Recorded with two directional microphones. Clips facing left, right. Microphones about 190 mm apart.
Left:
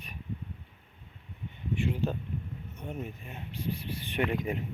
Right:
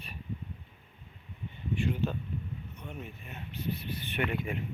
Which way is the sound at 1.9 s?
35° left (ahead or behind).